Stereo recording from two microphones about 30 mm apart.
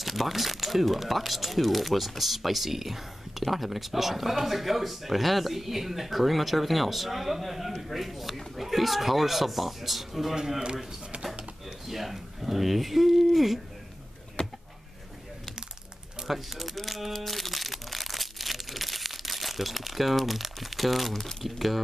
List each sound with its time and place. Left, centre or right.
0.0 s speech: centre
11.9 s speech: centre
14.4 s a sound: left
16.3 s crumpling: centre
21.2 s speech: centre
21.5 s speech: centre